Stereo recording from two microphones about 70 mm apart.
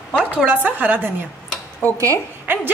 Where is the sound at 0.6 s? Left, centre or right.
Right.